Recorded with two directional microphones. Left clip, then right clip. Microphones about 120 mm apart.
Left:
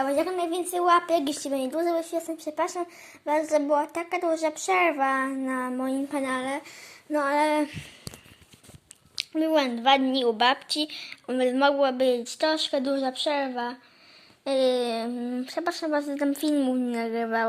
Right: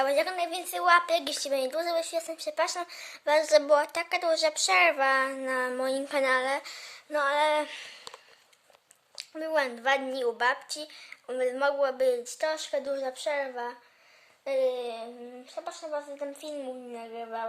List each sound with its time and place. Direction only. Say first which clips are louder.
0.0 s a woman's voice: left 1 dB; 15° right (ahead or behind)
5.5 s a sound: right 1 dB; 30° right (ahead or behind)
6.3 s a woman's voice: right 3 dB; 20° right (ahead or behind)
6.8 s speech: left 2 dB; centre (ahead or behind)
7.7 s a sound: right 1 dB; 10° right (ahead or behind)
9.3 s a woman's voice: left 4 dB; 10° right (ahead or behind)
14.7 s a woman's voice: left 7 dB; 35° left (ahead or behind)